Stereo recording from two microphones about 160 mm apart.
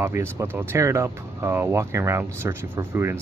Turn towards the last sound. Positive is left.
turn(degrees=-15)  # may be behind; listen again after turning